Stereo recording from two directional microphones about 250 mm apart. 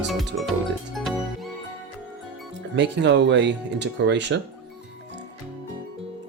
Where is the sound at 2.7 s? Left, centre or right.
Right.